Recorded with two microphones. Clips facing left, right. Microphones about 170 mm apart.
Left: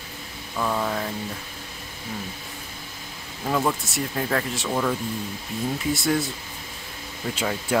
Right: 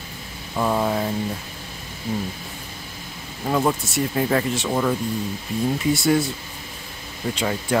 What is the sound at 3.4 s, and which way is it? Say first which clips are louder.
Speech: right 3 dB; 10° right (ahead or behind).